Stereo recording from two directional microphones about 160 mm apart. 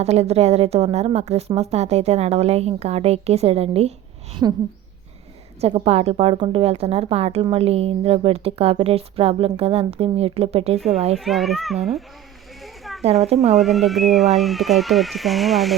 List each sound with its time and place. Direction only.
0.0 s speech: 40° right (ahead or behind)
4.4 s speech: 20° right (ahead or behind)
5.5 s speech: 40° right (ahead or behind)
11.2 s speech: centre (ahead or behind)
12.6 s a sound: centre (ahead or behind)
13.2 s speech: 40° right (ahead or behind)
13.6 s speech: centre (ahead or behind)